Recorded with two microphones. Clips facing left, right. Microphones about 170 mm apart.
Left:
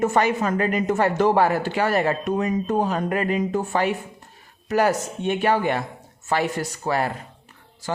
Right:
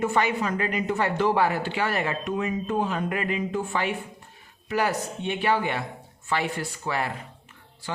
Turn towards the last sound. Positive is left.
turn(degrees=40)  # may be behind; listen again after turning